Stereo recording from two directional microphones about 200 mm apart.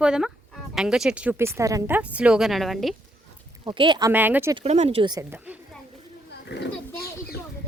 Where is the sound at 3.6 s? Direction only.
25° right (ahead or behind).